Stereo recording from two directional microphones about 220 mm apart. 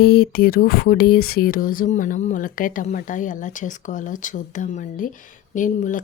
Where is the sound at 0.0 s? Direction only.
45° left (ahead or behind).